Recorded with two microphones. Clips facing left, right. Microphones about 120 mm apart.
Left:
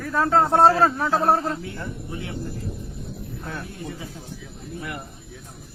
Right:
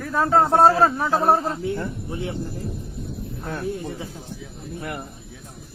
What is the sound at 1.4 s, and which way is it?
Speech, 25° right (ahead or behind).